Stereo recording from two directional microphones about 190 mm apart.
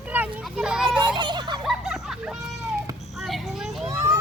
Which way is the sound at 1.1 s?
25° right (ahead or behind).